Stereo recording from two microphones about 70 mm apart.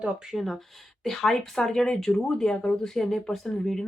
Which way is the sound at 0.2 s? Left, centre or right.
Centre.